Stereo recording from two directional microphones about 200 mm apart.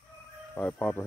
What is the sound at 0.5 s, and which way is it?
Music, 10° left (ahead or behind).